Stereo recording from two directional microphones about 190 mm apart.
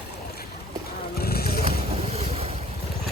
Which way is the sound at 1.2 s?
55° left (ahead or behind).